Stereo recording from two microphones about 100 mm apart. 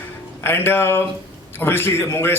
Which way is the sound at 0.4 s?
20° left (ahead or behind).